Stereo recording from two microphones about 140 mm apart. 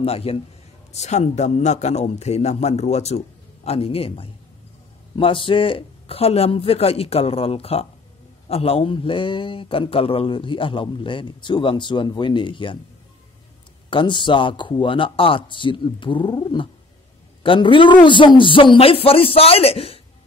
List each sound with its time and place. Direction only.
0.0 s a man's voice: 45° left (ahead or behind)
0.9 s a man's voice: 55° left (ahead or behind); by 12.7 s 35° left (ahead or behind)
13.8 s a woman's voice: 35° left (ahead or behind)